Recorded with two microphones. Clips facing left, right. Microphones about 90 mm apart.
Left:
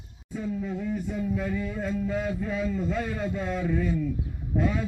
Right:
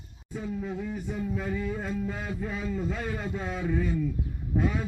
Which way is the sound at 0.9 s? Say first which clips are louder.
Left 3 dB; 5° right (ahead or behind).